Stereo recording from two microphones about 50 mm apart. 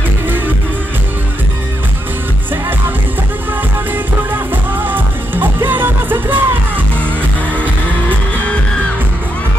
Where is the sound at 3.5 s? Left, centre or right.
Right.